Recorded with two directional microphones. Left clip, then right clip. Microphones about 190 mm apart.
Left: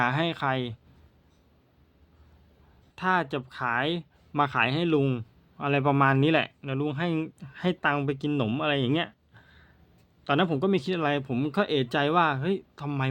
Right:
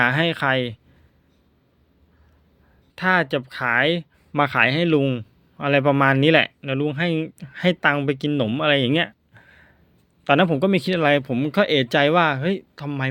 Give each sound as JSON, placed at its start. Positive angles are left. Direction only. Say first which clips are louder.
{"t": 0.0, "sound": "speech", "louder": "right 7 dB", "side_deg": -15}
{"t": 2.9, "sound": "speech", "louder": "right 7 dB", "side_deg": -15}